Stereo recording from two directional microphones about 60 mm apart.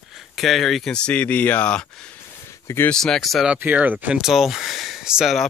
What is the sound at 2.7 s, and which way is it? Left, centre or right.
Speech, left.